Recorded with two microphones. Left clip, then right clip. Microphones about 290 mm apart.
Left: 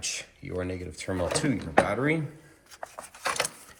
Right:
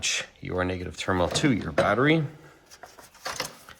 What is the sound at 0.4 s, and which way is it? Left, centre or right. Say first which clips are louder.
Speech: right 2 dB; centre.